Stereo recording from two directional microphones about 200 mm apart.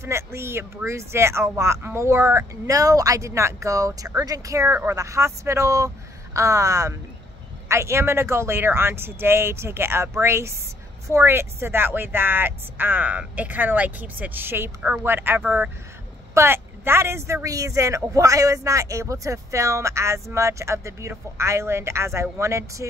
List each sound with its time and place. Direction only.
0.0 s speech: 15° right (ahead or behind)